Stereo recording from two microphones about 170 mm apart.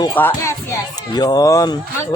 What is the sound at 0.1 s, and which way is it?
Speech, 10° left (ahead or behind).